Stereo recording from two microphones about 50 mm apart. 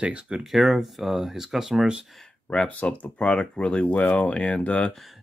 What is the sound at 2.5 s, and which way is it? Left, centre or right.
Speech, left.